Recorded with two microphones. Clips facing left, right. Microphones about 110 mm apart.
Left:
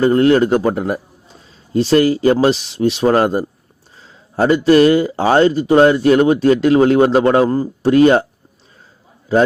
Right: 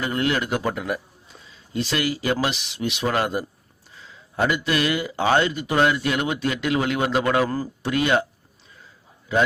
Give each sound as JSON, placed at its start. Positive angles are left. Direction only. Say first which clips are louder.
{"t": 0.0, "sound": "speech", "louder": "left 12 dB", "side_deg": 35}
{"t": 9.3, "sound": "speech", "louder": "left 8 dB", "side_deg": 35}